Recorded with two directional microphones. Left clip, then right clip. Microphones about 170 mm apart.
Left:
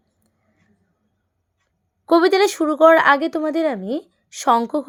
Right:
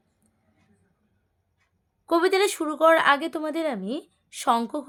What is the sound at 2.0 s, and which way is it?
Speech, 35° left (ahead or behind).